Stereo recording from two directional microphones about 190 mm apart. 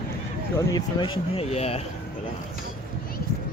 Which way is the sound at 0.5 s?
20° left (ahead or behind).